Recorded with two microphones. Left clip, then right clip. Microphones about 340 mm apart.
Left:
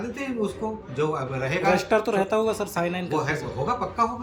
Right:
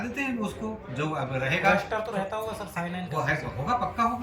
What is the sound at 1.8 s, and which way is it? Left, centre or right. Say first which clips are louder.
Speech: left 7 dB; left.